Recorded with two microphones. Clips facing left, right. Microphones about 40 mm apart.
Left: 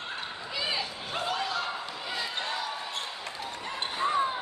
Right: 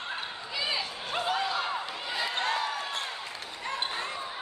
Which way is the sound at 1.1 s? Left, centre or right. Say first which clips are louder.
Right 2 dB; centre.